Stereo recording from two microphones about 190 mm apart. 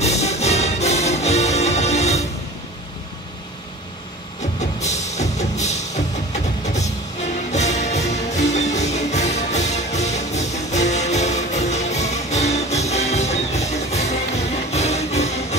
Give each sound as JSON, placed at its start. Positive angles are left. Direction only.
{"t": 0.0, "sound": "music", "side_deg": 35}
{"t": 4.6, "sound": "music", "side_deg": 35}